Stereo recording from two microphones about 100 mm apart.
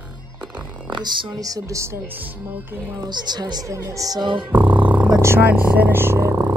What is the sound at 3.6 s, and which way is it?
Music, 30° right (ahead or behind).